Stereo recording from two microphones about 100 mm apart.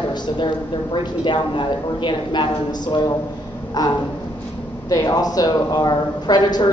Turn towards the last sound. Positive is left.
turn(degrees=45)  # may be behind; listen again after turning